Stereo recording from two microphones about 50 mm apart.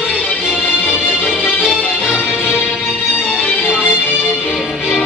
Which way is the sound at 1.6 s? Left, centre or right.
Centre.